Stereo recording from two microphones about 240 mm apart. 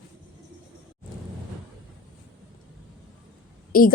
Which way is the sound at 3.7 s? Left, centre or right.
Left.